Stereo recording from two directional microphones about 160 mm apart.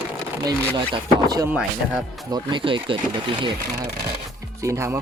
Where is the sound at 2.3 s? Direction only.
30° right (ahead or behind).